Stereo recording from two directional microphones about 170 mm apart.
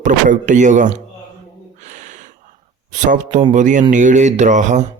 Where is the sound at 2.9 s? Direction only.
45° right (ahead or behind).